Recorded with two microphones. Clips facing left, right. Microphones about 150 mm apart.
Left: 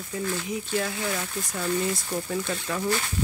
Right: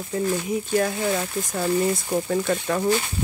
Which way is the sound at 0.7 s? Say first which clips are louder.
Right 6 dB; 40° right (ahead or behind).